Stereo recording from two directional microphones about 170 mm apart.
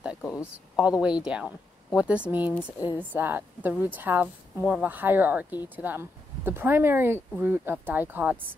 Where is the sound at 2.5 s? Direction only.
10° left (ahead or behind).